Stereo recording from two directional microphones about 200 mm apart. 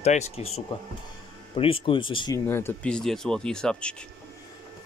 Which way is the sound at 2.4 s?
10° left (ahead or behind).